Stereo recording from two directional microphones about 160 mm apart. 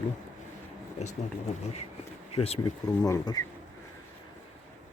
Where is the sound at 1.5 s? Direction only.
45° left (ahead or behind).